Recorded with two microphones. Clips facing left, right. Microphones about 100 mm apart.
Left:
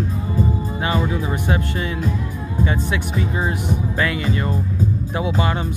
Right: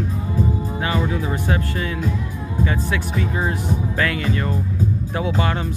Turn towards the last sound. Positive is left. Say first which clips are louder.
# left 1 dB
turn(degrees=10)  # may be behind; listen again after turning